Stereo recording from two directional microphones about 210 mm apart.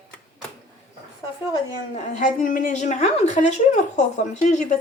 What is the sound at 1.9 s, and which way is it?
A woman's voice, 35° left (ahead or behind).